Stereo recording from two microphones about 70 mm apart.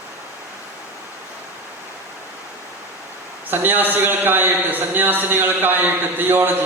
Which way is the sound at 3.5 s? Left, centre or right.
Right.